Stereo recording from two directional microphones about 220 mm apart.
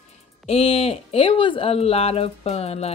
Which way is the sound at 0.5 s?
25° left (ahead or behind).